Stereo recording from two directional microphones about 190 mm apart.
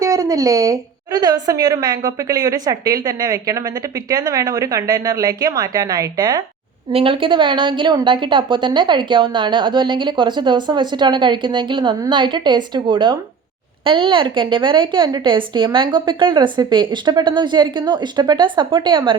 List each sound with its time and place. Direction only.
0.0 s a woman's voice: 15° right (ahead or behind)